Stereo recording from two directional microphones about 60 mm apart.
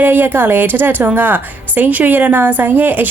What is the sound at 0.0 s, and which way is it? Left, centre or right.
A woman's voice, right.